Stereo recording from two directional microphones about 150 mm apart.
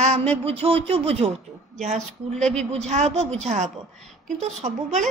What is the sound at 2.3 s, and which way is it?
Speech, 5° left (ahead or behind).